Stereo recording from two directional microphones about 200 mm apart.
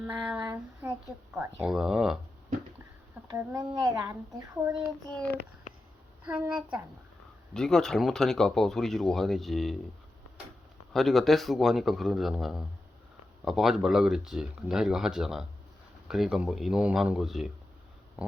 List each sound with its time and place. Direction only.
0.0 s speech: 5° right (ahead or behind)
3.2 s a child's voice: 15° right (ahead or behind)
6.2 s a child's voice: 5° right (ahead or behind)
10.9 s speech: centre (ahead or behind)
18.2 s a sound: 5° right (ahead or behind)